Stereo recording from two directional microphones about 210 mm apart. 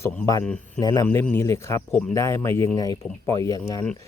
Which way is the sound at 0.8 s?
20° left (ahead or behind).